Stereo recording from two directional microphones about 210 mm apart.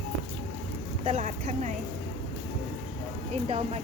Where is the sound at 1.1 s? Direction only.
35° right (ahead or behind).